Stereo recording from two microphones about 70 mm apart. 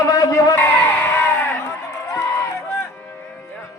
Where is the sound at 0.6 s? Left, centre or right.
Left.